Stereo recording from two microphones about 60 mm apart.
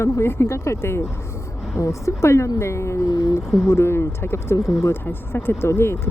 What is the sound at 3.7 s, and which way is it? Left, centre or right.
Speech, left.